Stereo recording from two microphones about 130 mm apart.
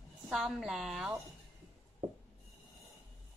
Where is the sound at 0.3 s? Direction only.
Centre (ahead or behind).